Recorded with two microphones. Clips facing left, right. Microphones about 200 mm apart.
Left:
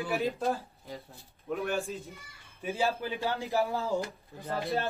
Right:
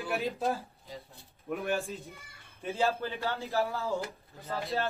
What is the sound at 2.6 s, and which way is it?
Speech, 15° left (ahead or behind).